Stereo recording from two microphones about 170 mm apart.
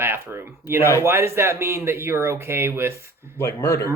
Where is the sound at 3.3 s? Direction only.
20° left (ahead or behind).